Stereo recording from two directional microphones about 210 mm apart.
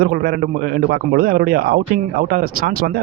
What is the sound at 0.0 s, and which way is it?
Speech, 45° right (ahead or behind).